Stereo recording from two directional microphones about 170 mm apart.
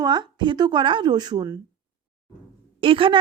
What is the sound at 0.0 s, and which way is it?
Speech, 25° right (ahead or behind).